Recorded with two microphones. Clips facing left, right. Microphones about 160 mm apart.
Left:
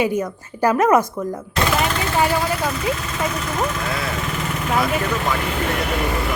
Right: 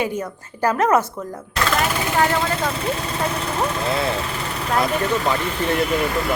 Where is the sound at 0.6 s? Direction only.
10° left (ahead or behind).